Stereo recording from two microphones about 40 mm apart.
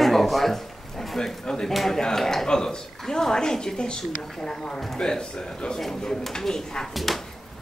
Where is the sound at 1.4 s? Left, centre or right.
Centre.